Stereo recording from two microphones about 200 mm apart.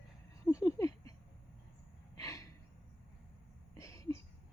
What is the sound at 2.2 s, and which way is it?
Gasp, 15° left (ahead or behind).